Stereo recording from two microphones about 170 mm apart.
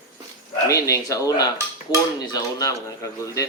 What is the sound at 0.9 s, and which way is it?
Cutlery, 20° left (ahead or behind).